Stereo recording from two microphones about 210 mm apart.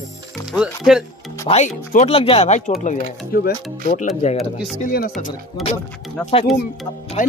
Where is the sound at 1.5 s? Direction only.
30° left (ahead or behind).